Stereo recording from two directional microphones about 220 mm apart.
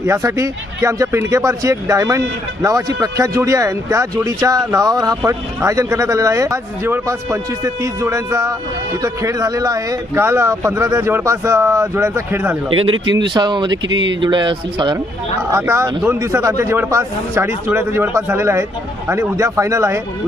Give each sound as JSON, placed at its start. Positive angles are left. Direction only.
{"t": 0.0, "sound": "speech", "side_deg": -15}
{"t": 12.9, "sound": "speech", "side_deg": -55}
{"t": 13.2, "sound": "speech", "side_deg": -20}
{"t": 13.8, "sound": "speech", "side_deg": -60}
{"t": 14.2, "sound": "speech", "side_deg": -20}